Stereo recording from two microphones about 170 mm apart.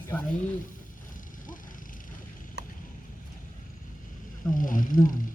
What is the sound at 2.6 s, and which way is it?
Vehicle, 90° right.